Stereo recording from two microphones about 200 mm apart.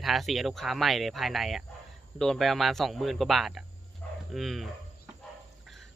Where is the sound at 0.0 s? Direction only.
Centre (ahead or behind).